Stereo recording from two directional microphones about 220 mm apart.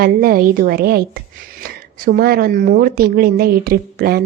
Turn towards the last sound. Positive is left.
turn(degrees=-45)  # may be behind; listen again after turning